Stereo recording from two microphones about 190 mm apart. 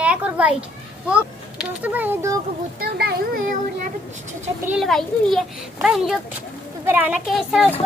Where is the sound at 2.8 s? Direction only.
55° right (ahead or behind).